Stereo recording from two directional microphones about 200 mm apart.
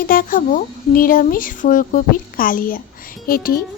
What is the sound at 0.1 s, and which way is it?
A child's voice, 45° left (ahead or behind).